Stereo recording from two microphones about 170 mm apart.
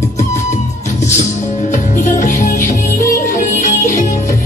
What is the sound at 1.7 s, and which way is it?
Music, 45° left (ahead or behind).